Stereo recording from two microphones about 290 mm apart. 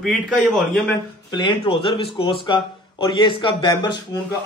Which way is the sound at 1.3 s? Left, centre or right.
Centre.